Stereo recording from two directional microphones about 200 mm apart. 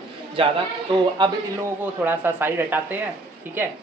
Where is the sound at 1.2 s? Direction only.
20° right (ahead or behind).